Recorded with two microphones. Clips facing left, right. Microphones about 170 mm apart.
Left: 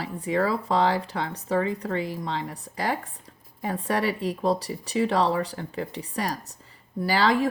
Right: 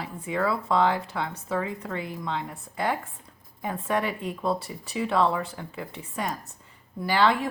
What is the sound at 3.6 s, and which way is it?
Speech, 40° left (ahead or behind).